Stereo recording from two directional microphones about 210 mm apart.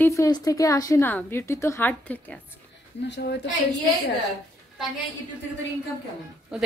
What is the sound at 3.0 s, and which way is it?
Speech, 55° left (ahead or behind).